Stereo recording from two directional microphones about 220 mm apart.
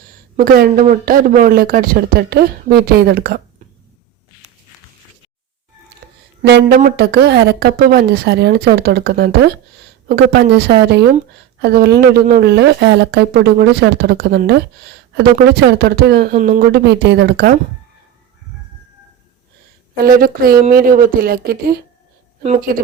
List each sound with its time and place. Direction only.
0.3 s speech: 40° right (ahead or behind)
5.9 s a sound: 50° right (ahead or behind)
6.4 s speech: 45° right (ahead or behind)
20.0 s speech: 40° right (ahead or behind)